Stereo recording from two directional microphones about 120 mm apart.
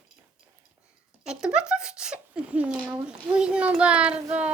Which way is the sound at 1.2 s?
5° right (ahead or behind).